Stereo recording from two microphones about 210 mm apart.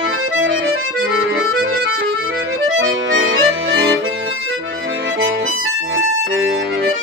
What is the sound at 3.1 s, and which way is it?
Music, 60° right (ahead or behind).